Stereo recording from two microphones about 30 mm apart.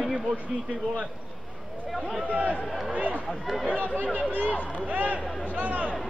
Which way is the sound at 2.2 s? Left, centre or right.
Right.